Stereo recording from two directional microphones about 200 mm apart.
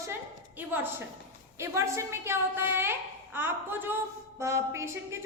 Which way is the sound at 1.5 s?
15° right (ahead or behind).